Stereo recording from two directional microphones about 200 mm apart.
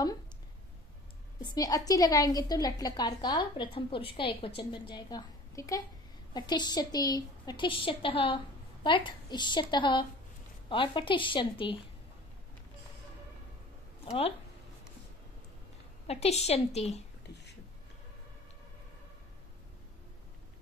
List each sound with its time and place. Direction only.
1.4 s a woman's voice: 20° left (ahead or behind)
16.1 s a woman's voice: 30° left (ahead or behind)
17.3 s a sound: 55° left (ahead or behind)